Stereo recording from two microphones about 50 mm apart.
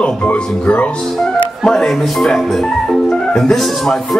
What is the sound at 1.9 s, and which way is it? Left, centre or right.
Speech, centre.